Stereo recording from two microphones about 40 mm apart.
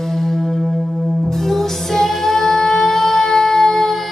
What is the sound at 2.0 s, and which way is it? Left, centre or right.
Music, centre.